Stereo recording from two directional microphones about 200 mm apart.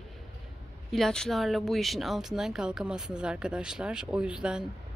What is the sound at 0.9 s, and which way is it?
Speech, 5° left (ahead or behind).